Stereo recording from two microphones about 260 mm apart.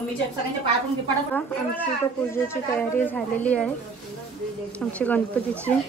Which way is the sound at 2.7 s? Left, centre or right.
Centre.